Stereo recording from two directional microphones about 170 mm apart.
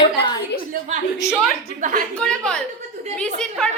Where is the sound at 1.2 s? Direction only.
20° left (ahead or behind).